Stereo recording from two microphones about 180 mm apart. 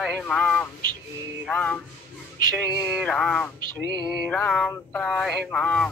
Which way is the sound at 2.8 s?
Centre (ahead or behind).